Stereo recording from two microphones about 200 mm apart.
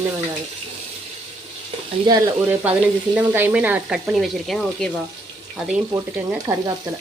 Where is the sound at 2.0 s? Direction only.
15° right (ahead or behind).